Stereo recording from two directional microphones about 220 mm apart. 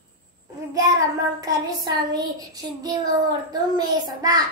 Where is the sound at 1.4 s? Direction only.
20° right (ahead or behind).